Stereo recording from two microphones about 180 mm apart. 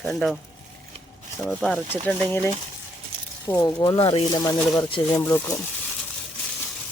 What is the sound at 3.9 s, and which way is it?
Speech, 30° left (ahead or behind).